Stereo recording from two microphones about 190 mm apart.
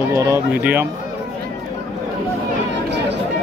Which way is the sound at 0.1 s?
15° right (ahead or behind).